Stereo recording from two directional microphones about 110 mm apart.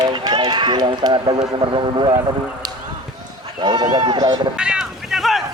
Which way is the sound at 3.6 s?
40° right (ahead or behind).